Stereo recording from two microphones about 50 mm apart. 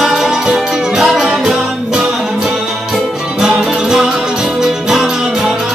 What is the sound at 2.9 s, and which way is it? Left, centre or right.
Music, centre.